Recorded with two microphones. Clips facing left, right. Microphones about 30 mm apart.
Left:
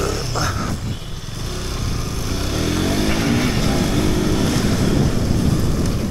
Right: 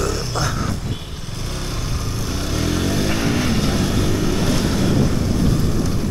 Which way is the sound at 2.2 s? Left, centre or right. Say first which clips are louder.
Left 1 dB; centre.